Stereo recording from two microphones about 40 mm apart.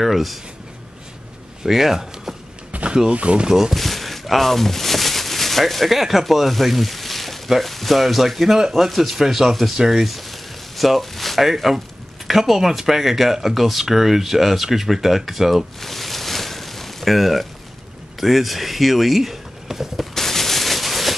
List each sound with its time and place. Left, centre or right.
0.0 s speech: centre
1.6 s speech: centre
2.7 s a sound: right
3.1 s speech: right
3.4 s speech: centre
3.7 s speech: centre
15.8 s a sound: centre
18.2 s speech: centre
20.2 s a sound: centre